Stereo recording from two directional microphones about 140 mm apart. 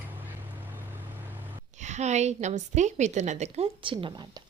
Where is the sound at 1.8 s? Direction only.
55° right (ahead or behind).